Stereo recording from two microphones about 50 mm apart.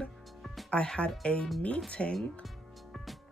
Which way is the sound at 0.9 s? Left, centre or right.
Centre.